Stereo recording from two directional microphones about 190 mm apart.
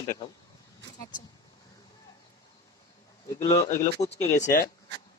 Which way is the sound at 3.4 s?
20° left (ahead or behind).